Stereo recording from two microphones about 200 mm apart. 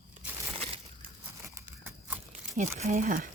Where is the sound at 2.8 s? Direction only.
40° right (ahead or behind).